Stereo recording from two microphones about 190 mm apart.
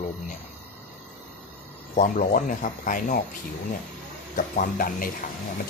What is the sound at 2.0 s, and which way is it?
Speech, 45° left (ahead or behind).